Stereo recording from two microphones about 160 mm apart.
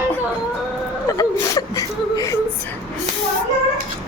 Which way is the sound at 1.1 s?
20° left (ahead or behind).